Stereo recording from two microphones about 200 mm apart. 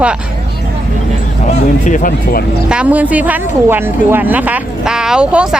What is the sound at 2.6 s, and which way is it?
Speech, 5° right (ahead or behind).